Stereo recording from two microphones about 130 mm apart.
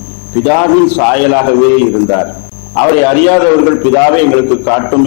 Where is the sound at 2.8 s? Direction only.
15° left (ahead or behind).